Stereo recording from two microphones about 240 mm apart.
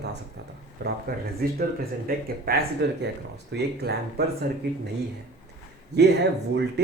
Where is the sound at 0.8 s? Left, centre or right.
Right.